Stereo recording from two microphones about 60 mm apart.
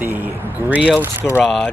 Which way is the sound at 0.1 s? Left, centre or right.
Right.